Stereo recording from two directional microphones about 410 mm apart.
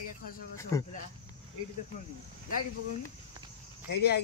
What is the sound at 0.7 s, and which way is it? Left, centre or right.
Speech, centre.